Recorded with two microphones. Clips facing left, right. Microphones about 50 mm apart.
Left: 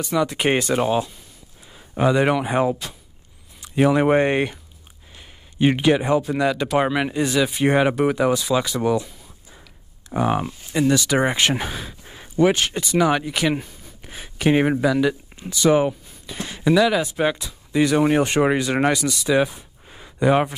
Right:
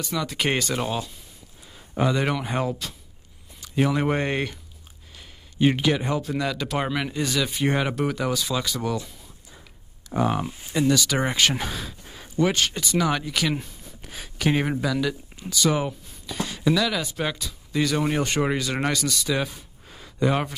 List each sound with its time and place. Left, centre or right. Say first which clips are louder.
0.1 s speech: left 6 dB; left
8.9 s a sound: left 7 dB; centre
10.0 s speech: left 3 dB; centre